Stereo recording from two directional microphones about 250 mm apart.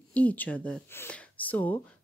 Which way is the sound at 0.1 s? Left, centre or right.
Centre.